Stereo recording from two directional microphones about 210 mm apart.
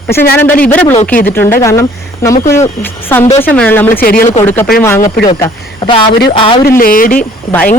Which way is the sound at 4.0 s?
45° left (ahead or behind).